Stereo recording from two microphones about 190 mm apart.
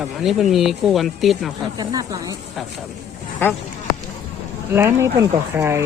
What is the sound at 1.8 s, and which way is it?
Speech, 20° right (ahead or behind).